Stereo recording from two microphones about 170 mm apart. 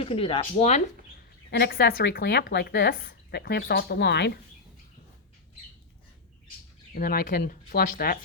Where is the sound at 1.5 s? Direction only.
80° left.